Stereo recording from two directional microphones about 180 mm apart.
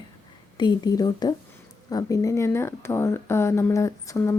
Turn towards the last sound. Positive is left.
turn(degrees=15)  # may be behind; listen again after turning